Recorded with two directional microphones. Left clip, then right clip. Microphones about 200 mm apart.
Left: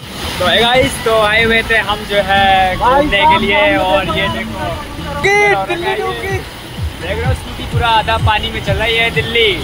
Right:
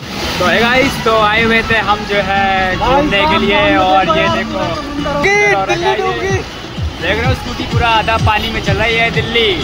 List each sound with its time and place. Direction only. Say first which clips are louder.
0.5 s speech: left 1 dB; 10° left (ahead or behind)
5.2 s speech: left 1 dB; 15° left (ahead or behind)
5.7 s speech: right 3 dB; 10° right (ahead or behind)
7.8 s speech: even; centre (ahead or behind)